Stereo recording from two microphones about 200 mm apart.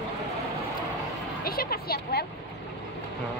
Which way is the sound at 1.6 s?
50° left (ahead or behind).